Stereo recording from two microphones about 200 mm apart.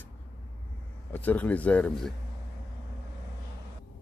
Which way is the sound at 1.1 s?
10° left (ahead or behind).